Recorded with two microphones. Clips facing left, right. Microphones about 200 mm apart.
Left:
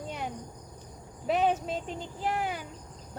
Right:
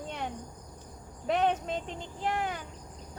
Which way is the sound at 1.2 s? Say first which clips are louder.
Left 1 dB; 5° left (ahead or behind).